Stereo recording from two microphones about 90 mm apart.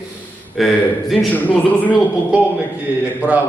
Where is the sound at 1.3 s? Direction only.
15° left (ahead or behind).